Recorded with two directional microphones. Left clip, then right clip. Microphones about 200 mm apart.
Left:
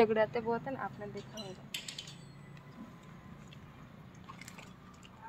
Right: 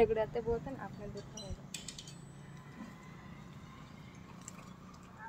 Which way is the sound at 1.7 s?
50° right (ahead or behind).